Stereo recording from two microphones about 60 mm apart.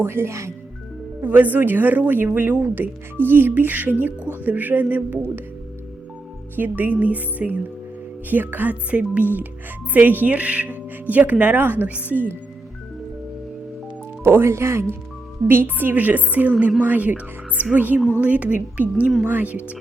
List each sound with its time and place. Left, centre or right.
0.0 s speech: right
1.2 s speech: right
6.6 s speech: right
14.3 s speech: right
15.4 s speech: right